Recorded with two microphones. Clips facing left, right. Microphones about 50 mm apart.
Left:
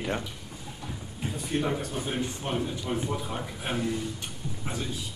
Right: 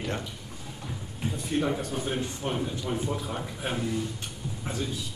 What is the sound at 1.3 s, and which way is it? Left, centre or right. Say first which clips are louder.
A man's voice: right 1 dB; centre.